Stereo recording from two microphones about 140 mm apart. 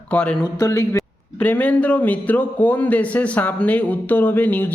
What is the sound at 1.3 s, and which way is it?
A man's voice, 10° left (ahead or behind).